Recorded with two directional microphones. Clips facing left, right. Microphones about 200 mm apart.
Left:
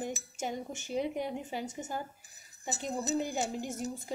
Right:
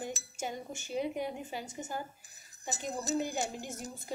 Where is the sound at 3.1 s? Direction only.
15° left (ahead or behind).